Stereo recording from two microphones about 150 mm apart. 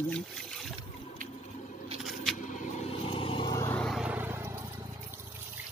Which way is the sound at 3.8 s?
Centre (ahead or behind).